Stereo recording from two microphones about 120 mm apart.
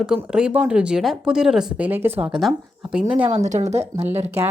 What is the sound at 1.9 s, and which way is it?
Speech, 15° right (ahead or behind).